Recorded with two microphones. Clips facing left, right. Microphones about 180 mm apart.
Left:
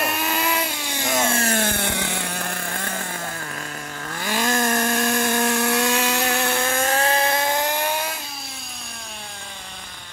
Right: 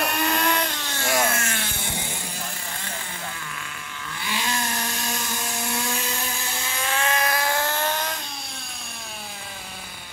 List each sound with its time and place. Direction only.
0.0 s music: 5° left (ahead or behind); by 1.6 s 30° left (ahead or behind)
1.6 s vehicle: 60° left (ahead or behind); by 8.1 s 10° left (ahead or behind)